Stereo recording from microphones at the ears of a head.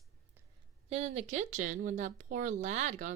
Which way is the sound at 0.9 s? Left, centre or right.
Right.